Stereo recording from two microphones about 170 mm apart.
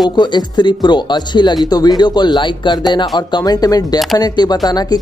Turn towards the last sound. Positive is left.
turn(degrees=25)  # may be behind; listen again after turning